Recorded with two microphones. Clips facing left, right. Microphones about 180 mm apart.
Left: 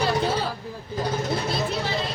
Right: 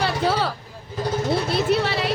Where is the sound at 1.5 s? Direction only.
70° right (ahead or behind).